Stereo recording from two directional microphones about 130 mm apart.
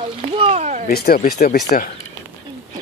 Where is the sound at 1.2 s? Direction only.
75° left (ahead or behind).